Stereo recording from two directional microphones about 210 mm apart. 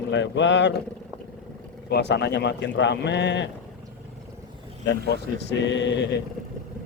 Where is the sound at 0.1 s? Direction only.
60° left (ahead or behind).